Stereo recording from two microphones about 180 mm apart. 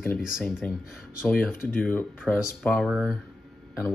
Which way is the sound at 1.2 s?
10° left (ahead or behind).